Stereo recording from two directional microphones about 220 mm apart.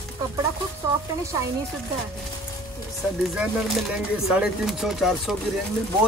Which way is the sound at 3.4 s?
5° right (ahead or behind).